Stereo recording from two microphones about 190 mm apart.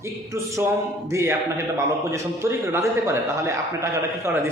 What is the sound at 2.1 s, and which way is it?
A man's voice, 15° right (ahead or behind).